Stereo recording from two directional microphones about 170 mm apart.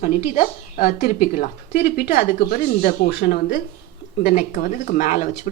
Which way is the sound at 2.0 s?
65° left (ahead or behind).